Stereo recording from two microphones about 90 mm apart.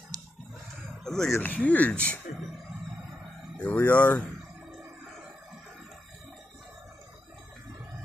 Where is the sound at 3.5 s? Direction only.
15° left (ahead or behind).